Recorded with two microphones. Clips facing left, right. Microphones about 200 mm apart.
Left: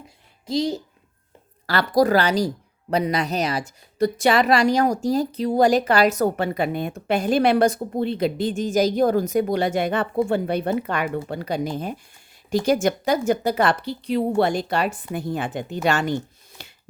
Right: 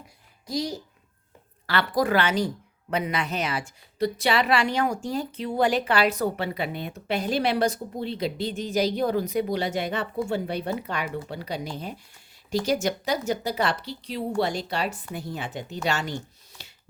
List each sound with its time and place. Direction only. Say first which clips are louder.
0.4 s a woman's voice: left 6 dB; 25° left (ahead or behind)
1.6 s a woman's voice: left 6 dB; 40° left (ahead or behind)
16.6 s a sound: left 6 dB; 55° left (ahead or behind)